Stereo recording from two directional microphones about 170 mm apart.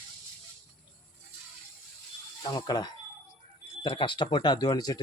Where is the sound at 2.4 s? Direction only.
25° left (ahead or behind).